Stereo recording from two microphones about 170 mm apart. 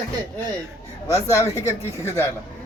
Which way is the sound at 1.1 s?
20° left (ahead or behind).